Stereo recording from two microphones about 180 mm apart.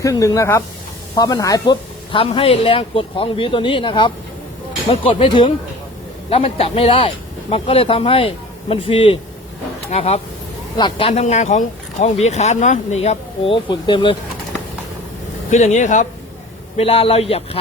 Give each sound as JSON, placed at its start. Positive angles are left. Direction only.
{"t": 0.0, "sound": "speech", "side_deg": 15}
{"t": 15.4, "sound": "speech", "side_deg": 40}
{"t": 16.7, "sound": "speech", "side_deg": 35}